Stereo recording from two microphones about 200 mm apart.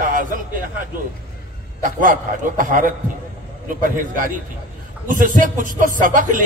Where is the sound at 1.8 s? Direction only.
40° right (ahead or behind).